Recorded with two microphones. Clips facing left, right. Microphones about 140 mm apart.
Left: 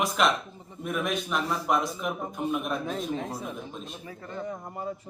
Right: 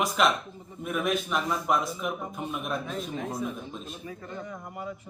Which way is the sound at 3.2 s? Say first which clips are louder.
Right 2 dB; 35° left (ahead or behind).